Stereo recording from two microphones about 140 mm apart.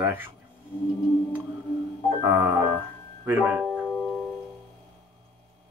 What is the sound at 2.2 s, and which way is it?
Speech, 20° right (ahead or behind).